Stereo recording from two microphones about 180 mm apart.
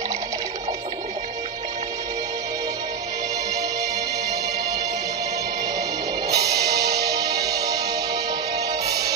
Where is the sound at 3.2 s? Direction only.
20° right (ahead or behind).